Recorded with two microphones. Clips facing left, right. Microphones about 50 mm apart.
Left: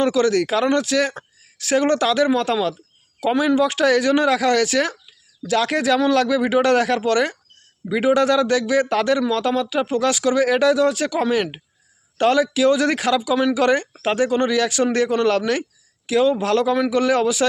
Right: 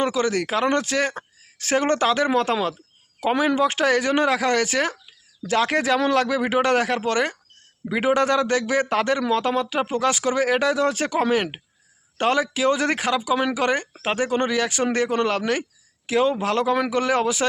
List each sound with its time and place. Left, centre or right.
0.0 s speech: right